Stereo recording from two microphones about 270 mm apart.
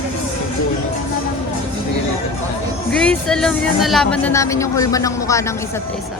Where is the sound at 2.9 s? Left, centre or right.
Centre.